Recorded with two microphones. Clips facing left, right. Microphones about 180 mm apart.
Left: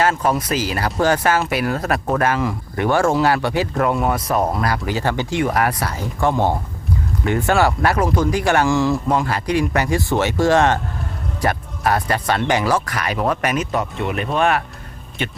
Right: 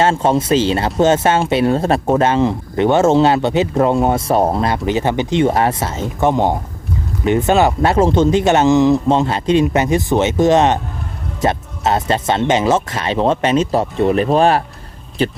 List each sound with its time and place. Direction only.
0.0 s speech: 25° right (ahead or behind)